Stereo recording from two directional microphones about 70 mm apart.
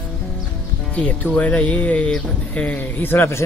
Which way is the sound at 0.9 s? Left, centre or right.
Centre.